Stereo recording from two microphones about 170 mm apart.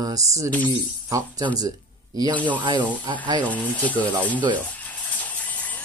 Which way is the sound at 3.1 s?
20° right (ahead or behind).